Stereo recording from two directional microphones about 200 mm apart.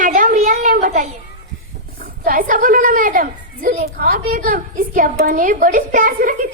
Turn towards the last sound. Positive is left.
turn(degrees=-45)  # may be behind; listen again after turning